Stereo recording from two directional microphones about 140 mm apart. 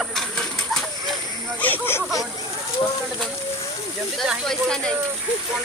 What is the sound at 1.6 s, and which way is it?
Speech, 15° left (ahead or behind).